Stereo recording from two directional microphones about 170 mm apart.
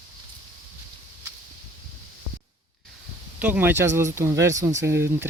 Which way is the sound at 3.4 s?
10° right (ahead or behind).